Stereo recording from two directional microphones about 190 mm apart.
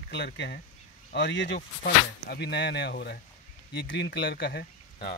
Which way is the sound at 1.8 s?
60° left (ahead or behind).